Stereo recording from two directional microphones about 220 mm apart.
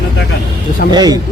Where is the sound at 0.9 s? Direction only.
15° right (ahead or behind).